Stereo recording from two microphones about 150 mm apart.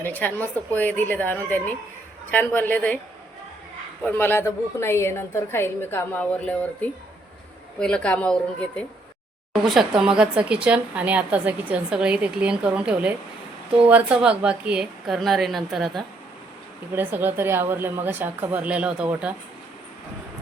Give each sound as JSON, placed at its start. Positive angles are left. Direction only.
{"t": 0.0, "sound": "a woman's voice", "side_deg": 10}
{"t": 4.0, "sound": "a woman's voice", "side_deg": 15}
{"t": 10.0, "sound": "a woman's voice", "side_deg": -5}
{"t": 16.9, "sound": "a woman's voice", "side_deg": -15}